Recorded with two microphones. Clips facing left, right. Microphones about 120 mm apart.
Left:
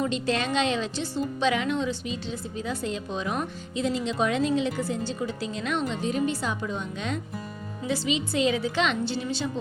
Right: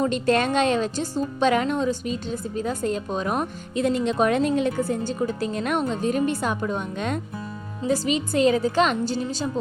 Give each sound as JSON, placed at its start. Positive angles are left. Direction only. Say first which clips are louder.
{"t": 0.0, "sound": "speech", "louder": "right 5 dB", "side_deg": -50}